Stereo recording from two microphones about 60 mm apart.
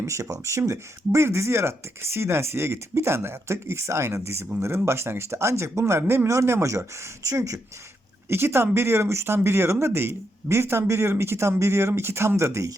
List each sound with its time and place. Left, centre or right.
0.0 s speech: right
4.5 s speech: right
4.9 s speech: right
6.2 s speech: right
8.3 s speech: right